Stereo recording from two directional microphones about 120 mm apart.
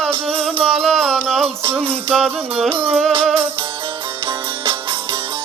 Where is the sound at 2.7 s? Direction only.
50° right (ahead or behind).